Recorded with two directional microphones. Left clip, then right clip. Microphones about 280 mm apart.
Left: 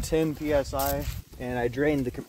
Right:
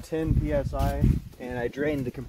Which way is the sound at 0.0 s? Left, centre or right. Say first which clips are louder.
Left 3 dB; left.